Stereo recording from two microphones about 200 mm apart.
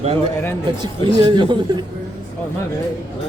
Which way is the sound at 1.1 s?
30° right (ahead or behind).